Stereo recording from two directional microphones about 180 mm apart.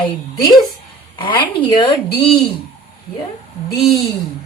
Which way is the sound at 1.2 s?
25° left (ahead or behind).